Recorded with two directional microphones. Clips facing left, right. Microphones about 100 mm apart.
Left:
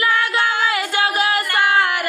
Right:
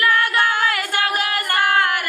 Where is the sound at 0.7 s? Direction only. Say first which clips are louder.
Left 2 dB; 15° left (ahead or behind).